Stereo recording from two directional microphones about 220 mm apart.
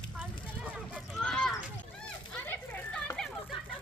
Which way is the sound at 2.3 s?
5° left (ahead or behind).